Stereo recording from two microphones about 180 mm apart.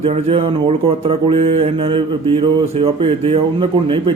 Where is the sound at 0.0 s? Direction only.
35° right (ahead or behind).